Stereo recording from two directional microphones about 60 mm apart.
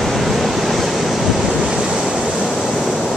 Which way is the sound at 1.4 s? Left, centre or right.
Centre.